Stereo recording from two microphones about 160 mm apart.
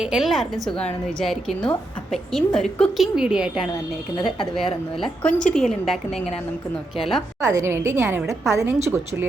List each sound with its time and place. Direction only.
0.0 s a woman's voice: centre (ahead or behind)
7.4 s a woman's voice: 20° right (ahead or behind)